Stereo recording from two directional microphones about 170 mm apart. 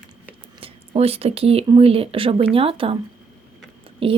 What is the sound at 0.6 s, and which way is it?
Speech, 35° right (ahead or behind).